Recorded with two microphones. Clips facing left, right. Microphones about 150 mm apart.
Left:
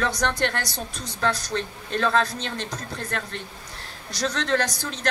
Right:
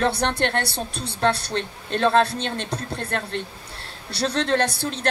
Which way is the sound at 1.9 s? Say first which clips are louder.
Right 4 dB; 25° right (ahead or behind).